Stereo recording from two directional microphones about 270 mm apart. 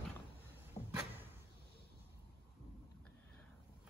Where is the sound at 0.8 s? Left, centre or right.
Centre.